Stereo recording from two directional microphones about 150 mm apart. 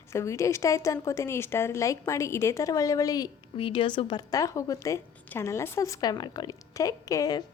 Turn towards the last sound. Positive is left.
turn(degrees=25)  # may be behind; listen again after turning